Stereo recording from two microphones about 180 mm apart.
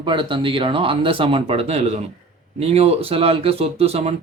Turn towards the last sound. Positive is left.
turn(degrees=-35)  # may be behind; listen again after turning